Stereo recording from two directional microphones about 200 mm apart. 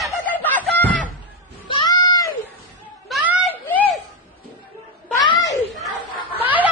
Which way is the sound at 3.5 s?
10° left (ahead or behind).